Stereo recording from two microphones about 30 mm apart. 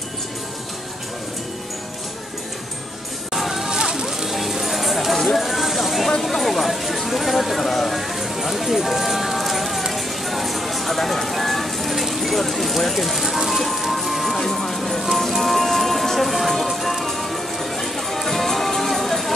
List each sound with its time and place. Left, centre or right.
3.3 s a sound: centre
3.8 s music: centre
4.3 s clip-clop: centre
5.5 s a sound: centre
6.0 s speech: centre
8.2 s clip-clop: centre
9.9 s music: centre
14.3 s music: centre